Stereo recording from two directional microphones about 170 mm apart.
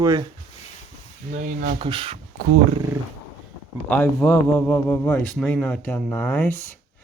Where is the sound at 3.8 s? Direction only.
10° left (ahead or behind).